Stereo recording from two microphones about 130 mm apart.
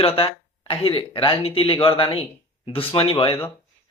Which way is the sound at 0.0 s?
45° left (ahead or behind).